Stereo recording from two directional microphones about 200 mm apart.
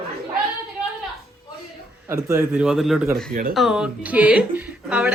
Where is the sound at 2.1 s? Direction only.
15° right (ahead or behind).